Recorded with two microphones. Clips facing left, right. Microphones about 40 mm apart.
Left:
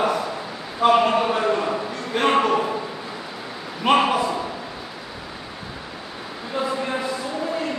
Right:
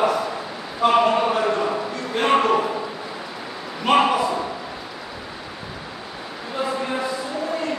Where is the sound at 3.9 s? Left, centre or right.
Centre.